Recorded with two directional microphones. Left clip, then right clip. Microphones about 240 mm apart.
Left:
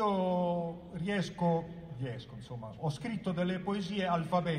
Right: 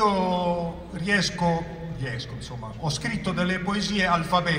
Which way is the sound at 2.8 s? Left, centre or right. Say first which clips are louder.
Right 9 dB; right.